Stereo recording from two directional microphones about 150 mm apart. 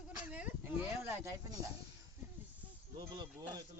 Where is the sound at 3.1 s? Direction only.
25° right (ahead or behind).